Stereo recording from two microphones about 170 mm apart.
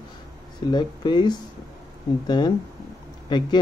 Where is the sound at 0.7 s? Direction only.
25° left (ahead or behind).